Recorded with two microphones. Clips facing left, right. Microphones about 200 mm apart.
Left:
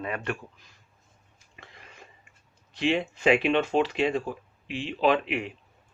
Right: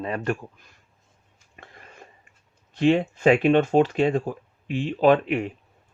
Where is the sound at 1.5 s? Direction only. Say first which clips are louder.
Right 3 dB; 45° right (ahead or behind).